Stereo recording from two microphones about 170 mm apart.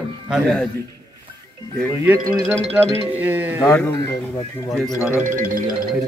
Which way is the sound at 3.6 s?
15° left (ahead or behind).